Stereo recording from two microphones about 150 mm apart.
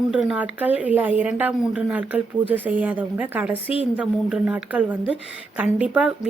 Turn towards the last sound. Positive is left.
turn(degrees=-10)  # may be behind; listen again after turning